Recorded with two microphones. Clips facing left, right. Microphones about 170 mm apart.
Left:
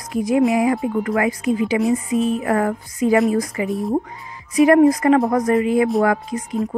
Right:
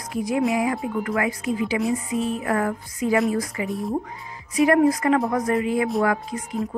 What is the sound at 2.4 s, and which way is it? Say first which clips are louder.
Speech: left 4 dB; 40° left (ahead or behind).